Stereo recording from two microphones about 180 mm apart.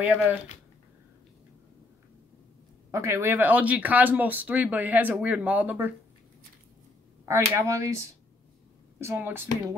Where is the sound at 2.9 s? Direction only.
15° right (ahead or behind).